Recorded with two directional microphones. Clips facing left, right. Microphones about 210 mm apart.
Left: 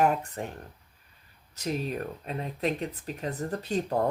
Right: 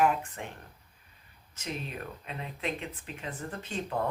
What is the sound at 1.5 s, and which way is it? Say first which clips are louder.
Speech: left 7 dB; 40° left (ahead or behind).